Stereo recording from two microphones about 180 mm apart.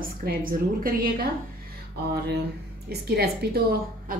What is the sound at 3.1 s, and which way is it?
A woman's voice, 60° right (ahead or behind).